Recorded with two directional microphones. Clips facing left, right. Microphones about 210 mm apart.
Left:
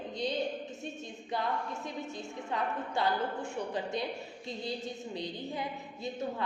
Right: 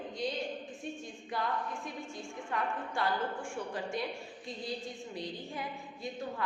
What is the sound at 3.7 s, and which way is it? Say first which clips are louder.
Speech: left 2 dB; 20° left (ahead or behind).